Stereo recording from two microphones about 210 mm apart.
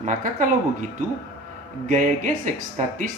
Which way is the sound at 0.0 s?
40° right (ahead or behind).